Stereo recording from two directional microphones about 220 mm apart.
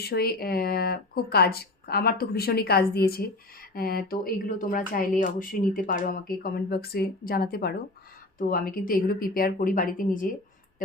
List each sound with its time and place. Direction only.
0.0 s speech: 45° left (ahead or behind)